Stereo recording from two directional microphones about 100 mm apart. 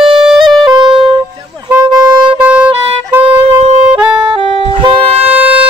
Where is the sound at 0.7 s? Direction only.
50° right (ahead or behind).